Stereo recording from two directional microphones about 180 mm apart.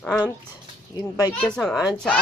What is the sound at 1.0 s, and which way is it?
Speech, 20° left (ahead or behind).